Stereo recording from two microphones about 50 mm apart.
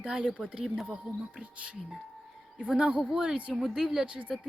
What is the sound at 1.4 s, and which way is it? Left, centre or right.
A woman's voice, right.